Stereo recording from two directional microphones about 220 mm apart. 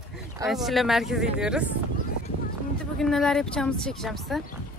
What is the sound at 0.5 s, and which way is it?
Speech, centre (ahead or behind).